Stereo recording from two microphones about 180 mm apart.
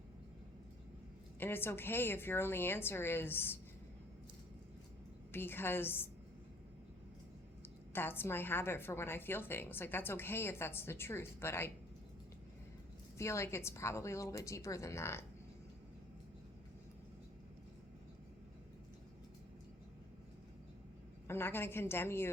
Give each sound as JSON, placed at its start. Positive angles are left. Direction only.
{"t": 1.4, "sound": "a woman's voice", "side_deg": 10}
{"t": 5.3, "sound": "a woman's voice", "side_deg": 10}
{"t": 7.9, "sound": "a woman's voice", "side_deg": 10}
{"t": 13.1, "sound": "a woman's voice", "side_deg": 15}
{"t": 21.2, "sound": "a woman's voice", "side_deg": 10}